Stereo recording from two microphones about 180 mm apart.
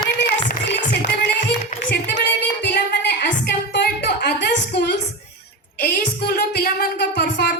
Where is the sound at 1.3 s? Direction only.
70° left (ahead or behind).